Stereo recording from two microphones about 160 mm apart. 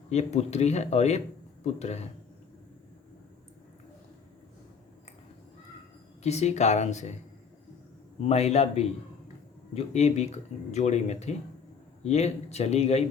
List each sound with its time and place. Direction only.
0.1 s speech: 45° left (ahead or behind)
6.2 s speech: 45° left (ahead or behind)
8.2 s speech: 40° left (ahead or behind)